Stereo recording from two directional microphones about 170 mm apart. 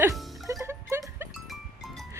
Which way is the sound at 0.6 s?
15° right (ahead or behind).